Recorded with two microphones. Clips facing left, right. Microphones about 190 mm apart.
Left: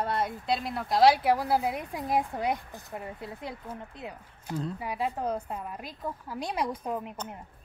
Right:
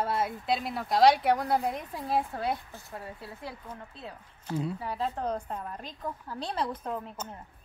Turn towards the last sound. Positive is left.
turn(degrees=15)  # may be behind; listen again after turning